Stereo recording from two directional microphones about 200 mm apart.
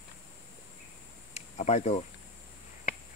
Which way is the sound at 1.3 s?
35° left (ahead or behind).